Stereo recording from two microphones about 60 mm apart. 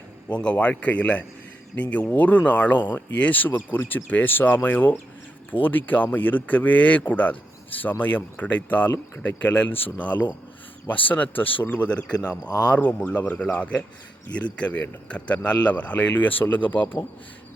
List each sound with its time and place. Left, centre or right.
0.3 s speech: left